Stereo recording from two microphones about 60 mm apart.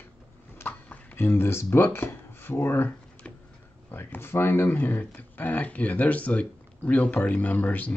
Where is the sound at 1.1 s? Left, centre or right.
Left.